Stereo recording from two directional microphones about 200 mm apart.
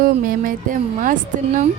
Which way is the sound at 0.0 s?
45° right (ahead or behind).